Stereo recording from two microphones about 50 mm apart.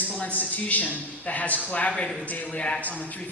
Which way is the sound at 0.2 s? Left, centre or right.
Left.